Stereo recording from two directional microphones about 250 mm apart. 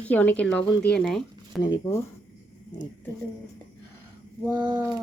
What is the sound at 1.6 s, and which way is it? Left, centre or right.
Speech, centre.